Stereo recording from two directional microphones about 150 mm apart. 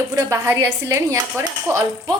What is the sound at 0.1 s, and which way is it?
Speech, 20° right (ahead or behind).